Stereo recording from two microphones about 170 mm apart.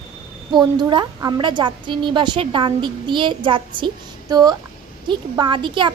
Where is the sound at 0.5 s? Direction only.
25° right (ahead or behind).